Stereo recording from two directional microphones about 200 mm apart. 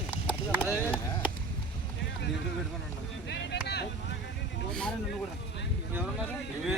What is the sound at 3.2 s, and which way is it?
Vehicle, 60° left (ahead or behind).